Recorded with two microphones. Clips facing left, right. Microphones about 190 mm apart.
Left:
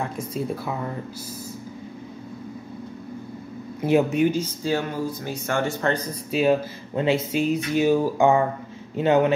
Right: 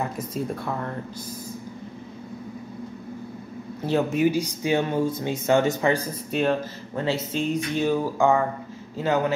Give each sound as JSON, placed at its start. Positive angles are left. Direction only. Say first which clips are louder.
{"t": 0.0, "sound": "speech", "louder": "even", "side_deg": 0}
{"t": 4.1, "sound": "speech", "louder": "even", "side_deg": -5}
{"t": 5.8, "sound": "speech", "louder": "right 2 dB", "side_deg": -10}
{"t": 6.3, "sound": "a man's voice", "louder": "left 3 dB", "side_deg": 10}